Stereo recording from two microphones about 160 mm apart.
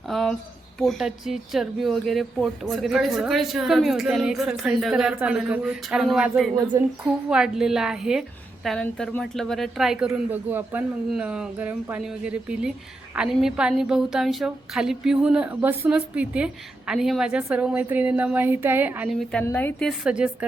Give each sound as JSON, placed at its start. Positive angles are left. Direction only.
{"t": 0.1, "sound": "a sound", "side_deg": 0}
{"t": 0.8, "sound": "speech", "side_deg": 0}
{"t": 6.7, "sound": "a woman's voice", "side_deg": -20}
{"t": 7.3, "sound": "a woman's voice", "side_deg": -5}
{"t": 19.2, "sound": "a woman's voice", "side_deg": 5}
{"t": 20.1, "sound": "a woman's voice", "side_deg": -5}